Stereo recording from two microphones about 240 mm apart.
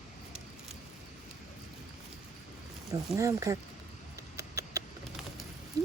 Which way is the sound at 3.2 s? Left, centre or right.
Centre.